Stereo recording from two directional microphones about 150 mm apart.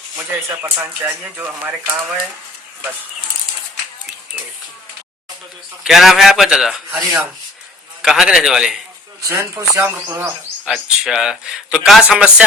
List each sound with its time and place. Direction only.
0.6 s speech: 15° right (ahead or behind)
5.8 s speech: centre (ahead or behind)
9.3 s speech: 20° right (ahead or behind)
10.7 s speech: centre (ahead or behind)